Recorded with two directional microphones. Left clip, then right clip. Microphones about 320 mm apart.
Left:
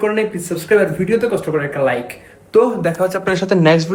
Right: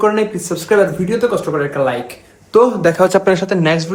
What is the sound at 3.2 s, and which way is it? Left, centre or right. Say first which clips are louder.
Speech: right 1 dB; centre.